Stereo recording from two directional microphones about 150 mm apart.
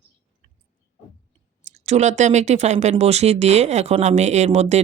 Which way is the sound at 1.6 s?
50° right (ahead or behind).